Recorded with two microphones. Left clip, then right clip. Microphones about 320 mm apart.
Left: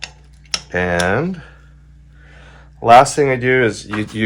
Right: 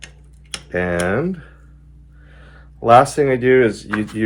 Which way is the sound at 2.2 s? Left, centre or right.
Left.